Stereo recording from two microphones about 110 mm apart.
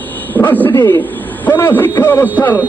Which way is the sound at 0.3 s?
15° left (ahead or behind).